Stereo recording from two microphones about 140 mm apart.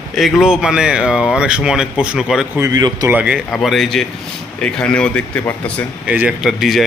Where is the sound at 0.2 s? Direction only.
5° right (ahead or behind).